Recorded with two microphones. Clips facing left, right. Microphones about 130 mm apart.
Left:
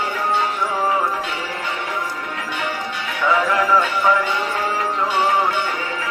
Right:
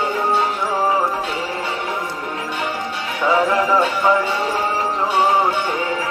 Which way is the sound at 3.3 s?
30° right (ahead or behind).